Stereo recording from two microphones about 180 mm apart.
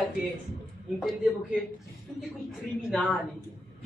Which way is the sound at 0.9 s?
Centre (ahead or behind).